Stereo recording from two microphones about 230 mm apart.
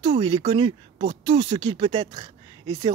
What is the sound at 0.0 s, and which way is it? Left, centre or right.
Speech, right.